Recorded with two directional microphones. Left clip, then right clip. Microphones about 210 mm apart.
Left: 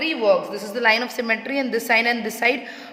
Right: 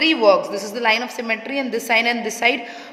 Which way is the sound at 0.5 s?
5° right (ahead or behind).